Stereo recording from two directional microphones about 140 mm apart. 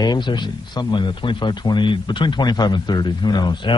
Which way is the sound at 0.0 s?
30° left (ahead or behind).